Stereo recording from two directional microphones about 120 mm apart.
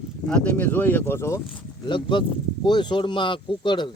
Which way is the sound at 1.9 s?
40° left (ahead or behind).